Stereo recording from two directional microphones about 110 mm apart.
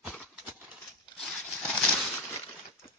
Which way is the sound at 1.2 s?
Centre (ahead or behind).